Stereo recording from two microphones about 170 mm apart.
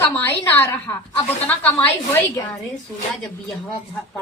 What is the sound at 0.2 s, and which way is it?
A woman's voice, 10° left (ahead or behind).